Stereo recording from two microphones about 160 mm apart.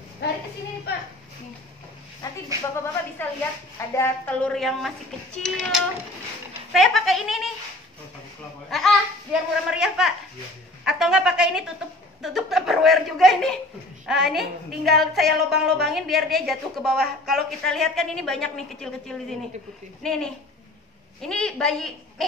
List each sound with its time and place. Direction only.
0.2 s a sound: 90° left
2.7 s a woman's voice: 15° left (ahead or behind); by 7.5 s centre (ahead or behind)
8.6 s a man's voice: centre (ahead or behind)